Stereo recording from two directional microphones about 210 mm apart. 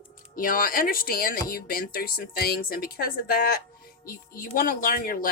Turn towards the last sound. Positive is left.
turn(degrees=45)  # may be behind; listen again after turning